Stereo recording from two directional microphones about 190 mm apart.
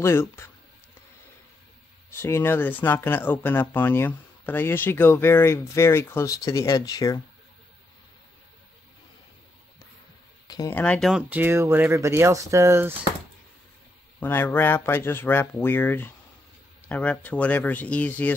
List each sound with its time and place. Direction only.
0.0 s speech: 15° left (ahead or behind)
2.0 s speech: 15° left (ahead or behind)
10.5 s speech: 20° left (ahead or behind)
10.8 s speech: centre (ahead or behind); by 12.9 s 15° right (ahead or behind)
14.2 s speech: 10° left (ahead or behind)